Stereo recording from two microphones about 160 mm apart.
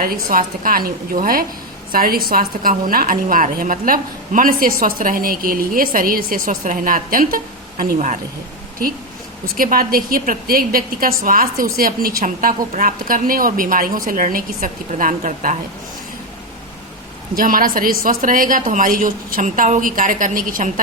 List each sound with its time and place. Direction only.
0.0 s a woman's voice: 65° right (ahead or behind)
7.9 s a woman's voice: 50° right (ahead or behind)
9.6 s a woman's voice: 65° right (ahead or behind)
17.3 s a woman's voice: 60° right (ahead or behind)